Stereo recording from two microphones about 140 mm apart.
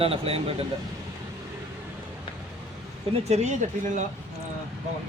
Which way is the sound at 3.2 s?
55° right (ahead or behind).